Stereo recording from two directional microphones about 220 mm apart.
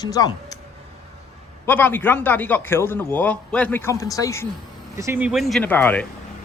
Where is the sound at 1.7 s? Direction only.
10° left (ahead or behind).